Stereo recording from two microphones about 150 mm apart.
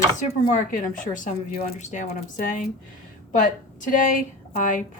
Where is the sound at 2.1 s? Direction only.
65° left (ahead or behind).